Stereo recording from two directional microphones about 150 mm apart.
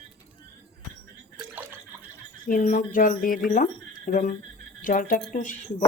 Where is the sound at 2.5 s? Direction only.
60° left (ahead or behind).